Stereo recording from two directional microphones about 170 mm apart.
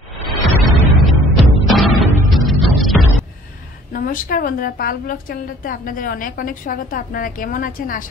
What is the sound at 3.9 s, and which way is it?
A woman's voice, 55° left (ahead or behind).